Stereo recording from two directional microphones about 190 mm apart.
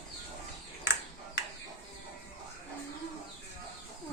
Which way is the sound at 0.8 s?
70° left (ahead or behind).